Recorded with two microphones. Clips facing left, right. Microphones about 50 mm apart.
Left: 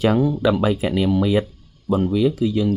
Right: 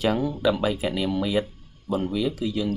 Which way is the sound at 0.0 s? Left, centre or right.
Left.